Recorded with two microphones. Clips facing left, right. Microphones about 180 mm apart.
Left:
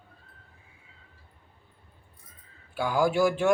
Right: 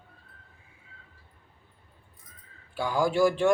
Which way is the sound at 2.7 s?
5° left (ahead or behind).